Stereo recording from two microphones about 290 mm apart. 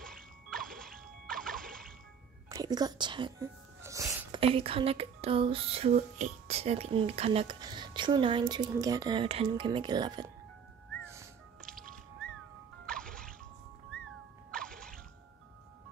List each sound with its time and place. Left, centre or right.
0.0 s music: centre
2.5 s speech: centre
12.8 s music: centre
14.5 s music: centre